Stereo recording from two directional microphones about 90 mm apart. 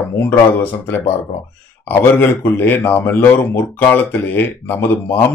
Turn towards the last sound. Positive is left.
turn(degrees=25)  # may be behind; listen again after turning